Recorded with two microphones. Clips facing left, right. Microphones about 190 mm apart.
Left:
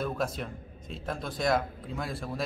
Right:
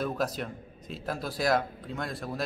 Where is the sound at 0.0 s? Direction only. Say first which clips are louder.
Right 1 dB; centre (ahead or behind).